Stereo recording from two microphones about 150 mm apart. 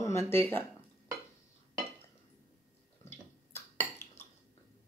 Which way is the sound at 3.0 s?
15° left (ahead or behind).